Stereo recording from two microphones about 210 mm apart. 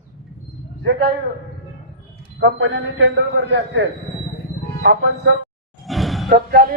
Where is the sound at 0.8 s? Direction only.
55° right (ahead or behind).